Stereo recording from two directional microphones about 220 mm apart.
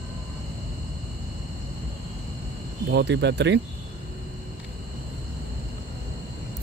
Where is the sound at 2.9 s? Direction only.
50° right (ahead or behind).